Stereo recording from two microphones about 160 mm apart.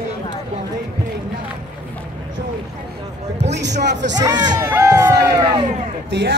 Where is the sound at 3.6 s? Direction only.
90° right.